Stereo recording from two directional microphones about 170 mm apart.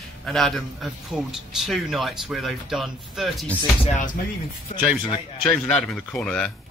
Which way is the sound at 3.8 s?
45° left (ahead or behind).